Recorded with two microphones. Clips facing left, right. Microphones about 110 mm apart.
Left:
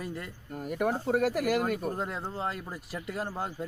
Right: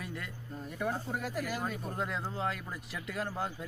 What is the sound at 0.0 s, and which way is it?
Speech, 35° left (ahead or behind).